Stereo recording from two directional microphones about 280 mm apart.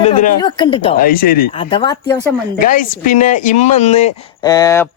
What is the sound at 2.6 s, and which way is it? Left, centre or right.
Speech, left.